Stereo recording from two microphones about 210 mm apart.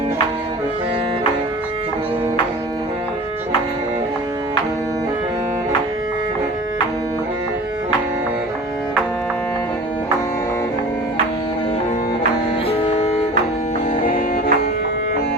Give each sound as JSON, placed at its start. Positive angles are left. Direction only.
{"t": 12.6, "sound": "music", "side_deg": 30}
{"t": 14.0, "sound": "music", "side_deg": 40}